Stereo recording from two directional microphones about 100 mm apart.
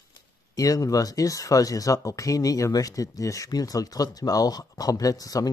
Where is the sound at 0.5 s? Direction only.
35° left (ahead or behind).